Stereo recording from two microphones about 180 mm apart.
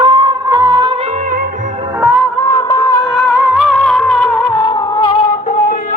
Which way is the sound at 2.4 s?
15° left (ahead or behind).